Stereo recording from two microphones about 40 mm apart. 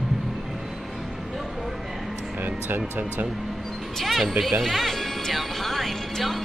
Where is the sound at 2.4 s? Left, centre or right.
Right.